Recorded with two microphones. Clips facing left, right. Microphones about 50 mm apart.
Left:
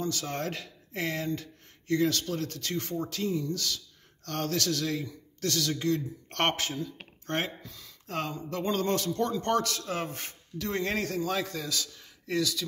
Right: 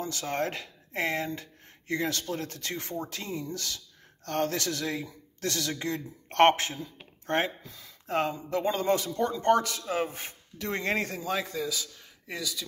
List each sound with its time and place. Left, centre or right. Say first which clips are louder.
0.0 s speech: right 2 dB; right; by 12.6 s centre